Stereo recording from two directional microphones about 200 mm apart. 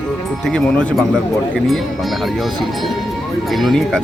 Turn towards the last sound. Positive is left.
turn(degrees=0)  # may be behind; listen again after turning